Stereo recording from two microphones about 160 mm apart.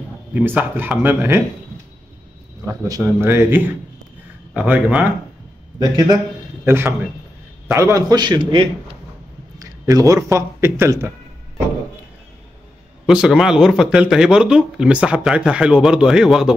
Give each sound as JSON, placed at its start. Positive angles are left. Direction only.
{"t": 0.3, "sound": "speech", "side_deg": -10}
{"t": 2.6, "sound": "speech", "side_deg": -15}
{"t": 5.8, "sound": "a man's voice", "side_deg": -25}
{"t": 13.0, "sound": "speech", "side_deg": -5}